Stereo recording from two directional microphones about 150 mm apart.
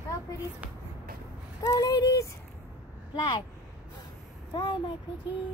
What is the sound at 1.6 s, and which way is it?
Speech, 25° left (ahead or behind).